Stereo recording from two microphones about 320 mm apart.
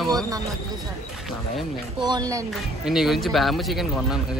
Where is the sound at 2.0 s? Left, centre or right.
Centre.